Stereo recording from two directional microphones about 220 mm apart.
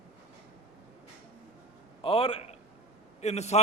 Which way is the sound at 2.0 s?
25° left (ahead or behind).